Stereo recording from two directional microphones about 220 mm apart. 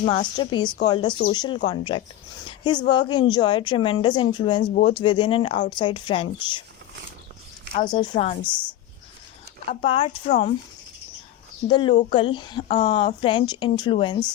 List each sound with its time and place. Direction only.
0.0 s a woman's voice: 20° left (ahead or behind)
7.8 s a woman's voice: 20° left (ahead or behind)
9.6 s a woman's voice: 25° left (ahead or behind)
11.7 s a woman's voice: 20° left (ahead or behind)